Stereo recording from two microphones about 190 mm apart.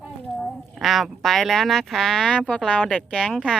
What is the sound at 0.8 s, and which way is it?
Speech, centre (ahead or behind).